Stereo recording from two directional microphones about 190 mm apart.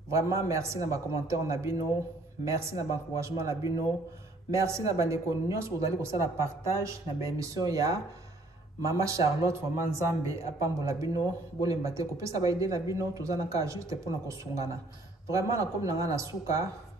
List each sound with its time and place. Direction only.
0.1 s speech: 15° right (ahead or behind)